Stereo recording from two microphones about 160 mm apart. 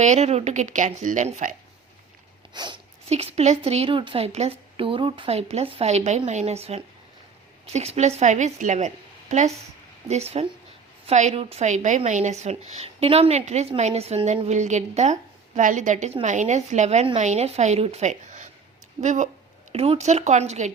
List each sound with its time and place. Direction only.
0.0 s a woman's voice: 45° right (ahead or behind)
2.5 s speech: 30° right (ahead or behind)
3.1 s a woman's voice: 40° right (ahead or behind)
10.1 s a woman's voice: 40° right (ahead or behind)